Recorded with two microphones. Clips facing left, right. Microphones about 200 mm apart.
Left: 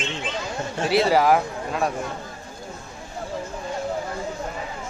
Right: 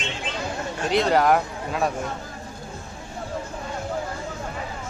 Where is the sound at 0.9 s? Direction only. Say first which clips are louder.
Left 1 dB; 5° left (ahead or behind).